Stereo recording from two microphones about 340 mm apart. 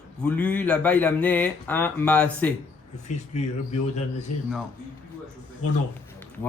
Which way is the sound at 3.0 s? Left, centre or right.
Centre.